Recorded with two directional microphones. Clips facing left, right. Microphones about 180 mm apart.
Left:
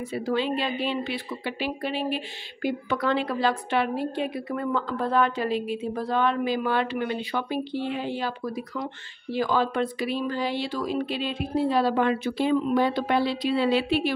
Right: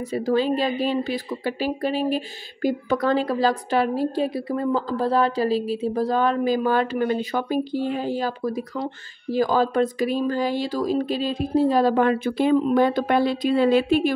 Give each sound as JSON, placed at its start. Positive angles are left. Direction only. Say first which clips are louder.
{"t": 0.1, "sound": "speech", "louder": "right 5 dB", "side_deg": -40}